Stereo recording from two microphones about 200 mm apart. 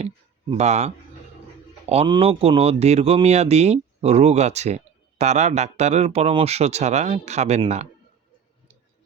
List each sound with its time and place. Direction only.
0.5 s speech: 35° right (ahead or behind)